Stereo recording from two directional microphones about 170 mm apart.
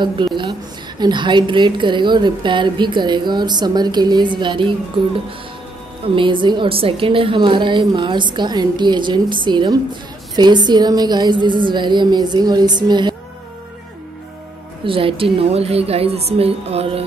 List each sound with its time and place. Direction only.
0.0 s a woman's voice: 25° right (ahead or behind)
6.0 s a woman's voice: 30° right (ahead or behind)
14.9 s a woman's voice: 30° right (ahead or behind)